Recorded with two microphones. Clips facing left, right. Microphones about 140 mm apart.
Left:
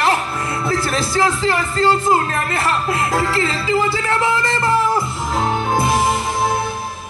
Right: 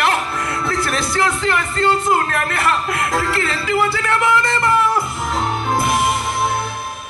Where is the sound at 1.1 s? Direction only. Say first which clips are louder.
Left 2 dB; 30° left (ahead or behind).